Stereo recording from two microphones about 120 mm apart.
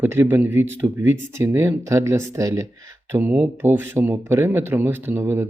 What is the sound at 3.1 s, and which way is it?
Speech, 15° right (ahead or behind).